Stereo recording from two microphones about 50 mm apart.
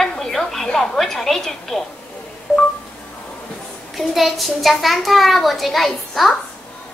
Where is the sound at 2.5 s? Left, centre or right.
Left.